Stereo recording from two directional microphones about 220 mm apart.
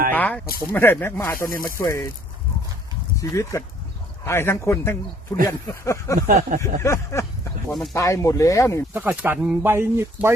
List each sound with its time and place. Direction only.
0.1 s speech: 5° left (ahead or behind)
3.2 s speech: 15° left (ahead or behind)
6.1 s speech: 40° right (ahead or behind)
6.6 s speech: 10° left (ahead or behind)
8.9 s speech: 10° right (ahead or behind)